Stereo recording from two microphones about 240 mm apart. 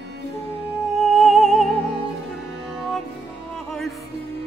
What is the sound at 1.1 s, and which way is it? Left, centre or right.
Music, centre.